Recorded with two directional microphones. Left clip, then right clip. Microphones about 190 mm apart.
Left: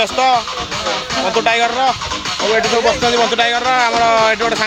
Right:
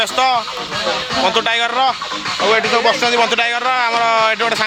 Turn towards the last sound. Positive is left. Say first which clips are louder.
# left 1 dB
turn(degrees=-30)  # may be behind; listen again after turning